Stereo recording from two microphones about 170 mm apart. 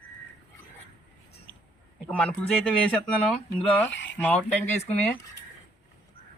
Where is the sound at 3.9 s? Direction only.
90° left.